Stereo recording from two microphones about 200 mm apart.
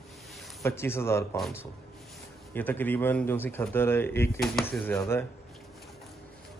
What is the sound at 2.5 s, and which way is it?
Speech, 10° left (ahead or behind).